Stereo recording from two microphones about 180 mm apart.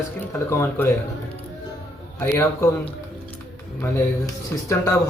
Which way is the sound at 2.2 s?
10° left (ahead or behind).